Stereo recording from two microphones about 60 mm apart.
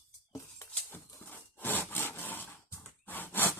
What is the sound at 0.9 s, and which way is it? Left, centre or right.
Wood, left.